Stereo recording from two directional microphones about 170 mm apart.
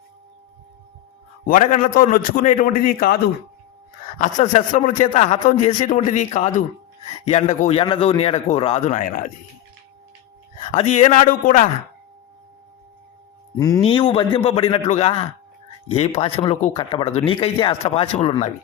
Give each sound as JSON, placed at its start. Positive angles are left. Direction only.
{"t": 1.5, "sound": "a man's voice", "side_deg": 50}
{"t": 4.2, "sound": "a man's voice", "side_deg": 45}
{"t": 10.8, "sound": "a man's voice", "side_deg": 45}
{"t": 13.6, "sound": "speech", "side_deg": 20}
{"t": 13.8, "sound": "speech", "side_deg": 30}